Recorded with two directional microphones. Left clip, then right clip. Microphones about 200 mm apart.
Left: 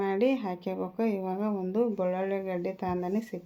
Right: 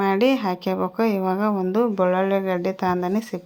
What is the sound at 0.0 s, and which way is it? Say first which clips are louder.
Speech: right 8 dB; 15° right (ahead or behind).